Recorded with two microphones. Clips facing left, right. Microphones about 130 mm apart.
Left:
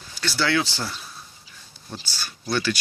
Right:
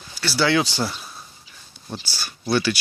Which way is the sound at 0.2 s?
10° right (ahead or behind).